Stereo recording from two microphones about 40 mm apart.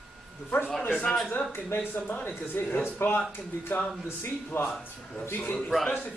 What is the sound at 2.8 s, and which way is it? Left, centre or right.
Speech, left.